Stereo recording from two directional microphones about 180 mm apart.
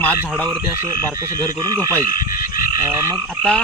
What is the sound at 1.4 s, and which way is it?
Speech, 20° right (ahead or behind).